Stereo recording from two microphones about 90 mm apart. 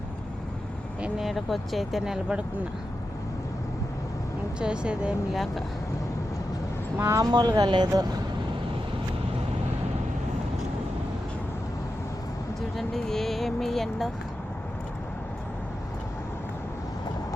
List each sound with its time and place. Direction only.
1.2 s speech: centre (ahead or behind)
4.6 s speech: 10° right (ahead or behind)
7.0 s speech: 35° right (ahead or behind)
7.3 s speech: 45° right (ahead or behind)
12.7 s speech: centre (ahead or behind)